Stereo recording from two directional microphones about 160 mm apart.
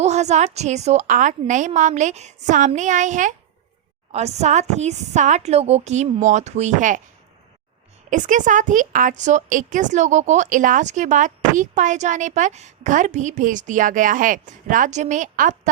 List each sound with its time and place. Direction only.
0.0 s a woman's voice: 45° right (ahead or behind)
8.1 s a woman's voice: 55° right (ahead or behind)